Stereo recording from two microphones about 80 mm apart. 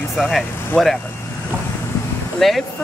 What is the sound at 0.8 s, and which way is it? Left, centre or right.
Speech, centre.